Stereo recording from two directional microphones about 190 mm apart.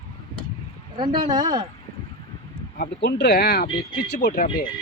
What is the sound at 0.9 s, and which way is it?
Speech, 25° right (ahead or behind).